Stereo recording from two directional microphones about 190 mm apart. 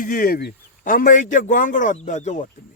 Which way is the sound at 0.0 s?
45° left (ahead or behind).